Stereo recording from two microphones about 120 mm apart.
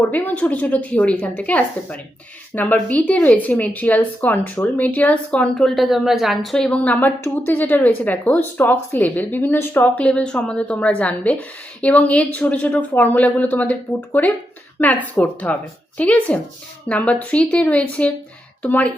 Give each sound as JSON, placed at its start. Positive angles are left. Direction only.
{"t": 0.1, "sound": "speech", "side_deg": 10}